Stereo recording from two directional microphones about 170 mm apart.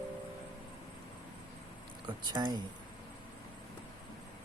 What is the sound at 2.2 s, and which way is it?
Speech, 25° right (ahead or behind).